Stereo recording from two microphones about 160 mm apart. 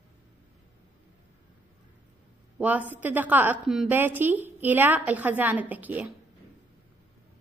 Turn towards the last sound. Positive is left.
turn(degrees=-10)  # may be behind; listen again after turning